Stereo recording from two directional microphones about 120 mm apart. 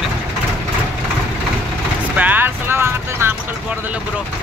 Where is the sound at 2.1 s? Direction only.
15° right (ahead or behind).